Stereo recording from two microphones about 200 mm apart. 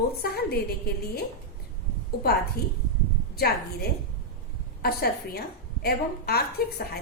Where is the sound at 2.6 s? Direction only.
50° left (ahead or behind).